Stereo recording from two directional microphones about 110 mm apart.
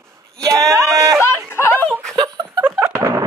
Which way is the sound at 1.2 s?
25° left (ahead or behind).